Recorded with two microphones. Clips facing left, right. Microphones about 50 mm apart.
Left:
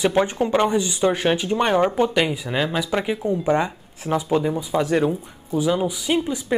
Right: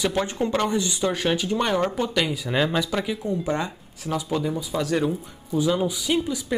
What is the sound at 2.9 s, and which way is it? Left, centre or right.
Speech, left.